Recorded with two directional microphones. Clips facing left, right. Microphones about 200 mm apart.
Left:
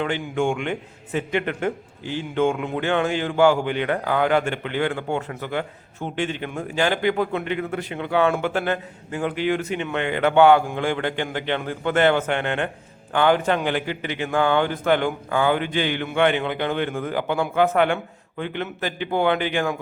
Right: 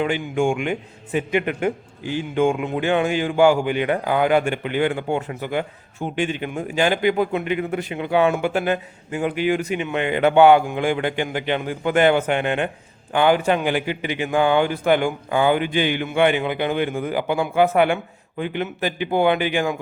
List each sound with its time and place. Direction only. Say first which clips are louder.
0.0 s a man's voice: right 2 dB; 15° right (ahead or behind)